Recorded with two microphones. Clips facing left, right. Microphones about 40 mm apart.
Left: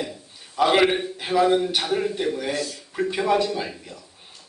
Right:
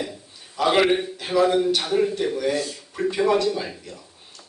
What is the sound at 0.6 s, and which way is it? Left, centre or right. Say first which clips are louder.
Speech: even; centre.